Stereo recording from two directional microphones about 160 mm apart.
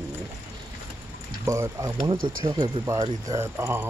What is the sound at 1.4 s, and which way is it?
Speech, 20° right (ahead or behind).